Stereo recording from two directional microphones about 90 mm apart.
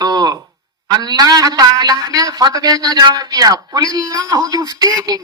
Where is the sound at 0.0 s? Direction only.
45° right (ahead or behind).